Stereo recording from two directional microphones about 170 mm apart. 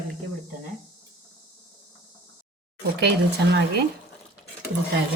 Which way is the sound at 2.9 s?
80° right.